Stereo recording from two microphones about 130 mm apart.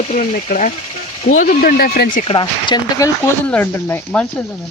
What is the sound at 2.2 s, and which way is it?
Speech, 40° left (ahead or behind).